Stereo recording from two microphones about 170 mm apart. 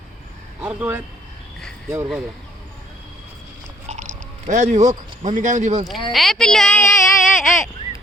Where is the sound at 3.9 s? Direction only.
45° right (ahead or behind).